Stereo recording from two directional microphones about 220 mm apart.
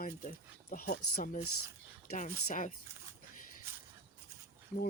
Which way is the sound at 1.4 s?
80° left.